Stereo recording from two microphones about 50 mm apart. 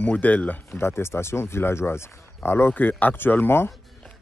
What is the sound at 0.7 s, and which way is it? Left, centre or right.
Speech, left.